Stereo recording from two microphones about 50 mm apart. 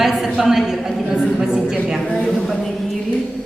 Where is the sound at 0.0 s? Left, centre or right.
Centre.